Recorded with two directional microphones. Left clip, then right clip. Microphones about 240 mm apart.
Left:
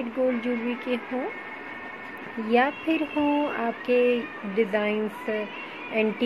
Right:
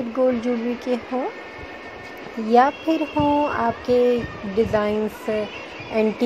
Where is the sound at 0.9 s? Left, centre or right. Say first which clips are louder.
Right 5 dB; right.